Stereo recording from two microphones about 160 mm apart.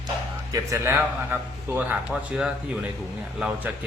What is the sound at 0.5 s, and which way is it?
A man's voice, 15° right (ahead or behind).